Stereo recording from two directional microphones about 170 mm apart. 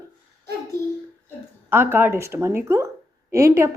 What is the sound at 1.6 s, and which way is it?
Speech, 10° right (ahead or behind).